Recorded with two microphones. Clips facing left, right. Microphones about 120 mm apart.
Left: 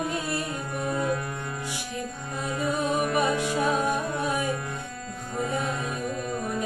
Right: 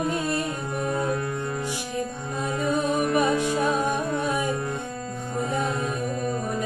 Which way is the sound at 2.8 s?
40° right (ahead or behind).